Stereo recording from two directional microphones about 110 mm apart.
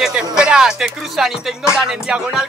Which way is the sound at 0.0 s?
5° right (ahead or behind).